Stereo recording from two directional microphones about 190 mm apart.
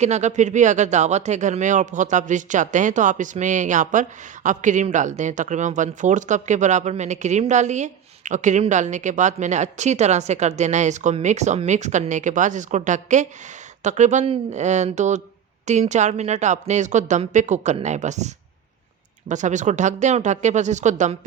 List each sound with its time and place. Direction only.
0.0 s speech: 35° right (ahead or behind)
19.3 s speech: 40° right (ahead or behind)